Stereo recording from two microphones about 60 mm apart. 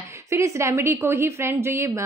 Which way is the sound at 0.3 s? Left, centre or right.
Right.